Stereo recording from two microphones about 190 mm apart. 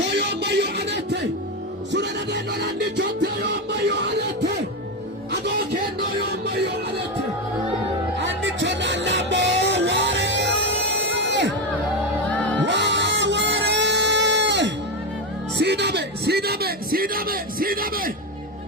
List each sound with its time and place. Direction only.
0.2 s music: 65° right (ahead or behind)
6.1 s music: 60° right (ahead or behind)
8.2 s music: 70° right (ahead or behind)
12.3 s music: 5° left (ahead or behind)
12.6 s music: 70° right (ahead or behind)
15.5 s a sound: 65° right (ahead or behind)